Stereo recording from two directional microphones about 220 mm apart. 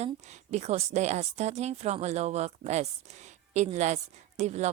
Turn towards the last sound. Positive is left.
turn(degrees=-30)  # may be behind; listen again after turning